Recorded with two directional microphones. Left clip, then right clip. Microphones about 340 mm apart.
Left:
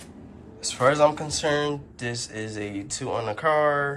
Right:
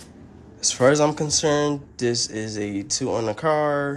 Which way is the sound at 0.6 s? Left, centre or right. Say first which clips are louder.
Right 2 dB; right.